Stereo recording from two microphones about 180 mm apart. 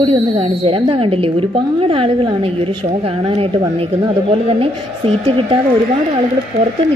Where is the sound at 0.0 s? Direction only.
30° right (ahead or behind).